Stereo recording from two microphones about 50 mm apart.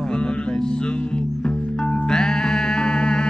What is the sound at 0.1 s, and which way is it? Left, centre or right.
Music, centre.